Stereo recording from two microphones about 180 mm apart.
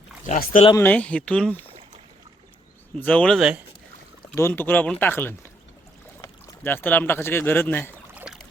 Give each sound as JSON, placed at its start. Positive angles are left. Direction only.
{"t": 0.3, "sound": "speech", "side_deg": 50}
{"t": 0.8, "sound": "speech", "side_deg": 10}
{"t": 3.0, "sound": "speech", "side_deg": 5}
{"t": 4.4, "sound": "speech", "side_deg": 10}
{"t": 8.1, "sound": "boat", "side_deg": -5}